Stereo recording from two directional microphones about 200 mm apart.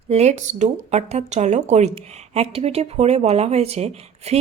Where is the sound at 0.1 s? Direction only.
35° right (ahead or behind).